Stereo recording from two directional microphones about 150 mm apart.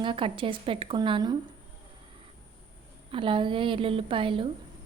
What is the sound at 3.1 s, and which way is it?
A woman's voice, 35° right (ahead or behind).